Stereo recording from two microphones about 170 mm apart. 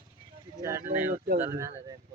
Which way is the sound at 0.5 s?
20° right (ahead or behind).